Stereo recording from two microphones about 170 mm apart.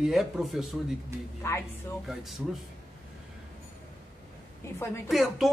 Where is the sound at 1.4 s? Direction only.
15° left (ahead or behind).